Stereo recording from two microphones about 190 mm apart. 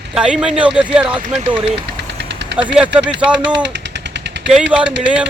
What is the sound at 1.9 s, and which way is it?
Engine, 65° right (ahead or behind).